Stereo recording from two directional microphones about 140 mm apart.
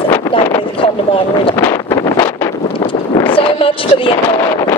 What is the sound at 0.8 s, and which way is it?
Speech, 40° left (ahead or behind).